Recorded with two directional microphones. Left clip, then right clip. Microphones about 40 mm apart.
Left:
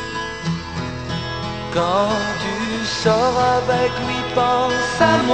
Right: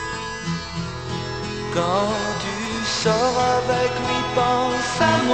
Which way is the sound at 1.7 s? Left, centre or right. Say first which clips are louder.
Left 3 dB; left.